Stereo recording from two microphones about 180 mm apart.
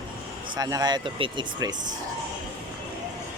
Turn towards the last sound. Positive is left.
turn(degrees=-25)  # may be behind; listen again after turning